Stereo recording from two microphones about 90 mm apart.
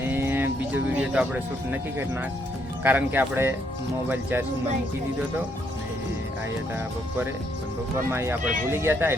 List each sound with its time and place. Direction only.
0.1 s a sound: 25° right (ahead or behind)
2.8 s speech: 20° right (ahead or behind)
8.1 s speech: 25° right (ahead or behind)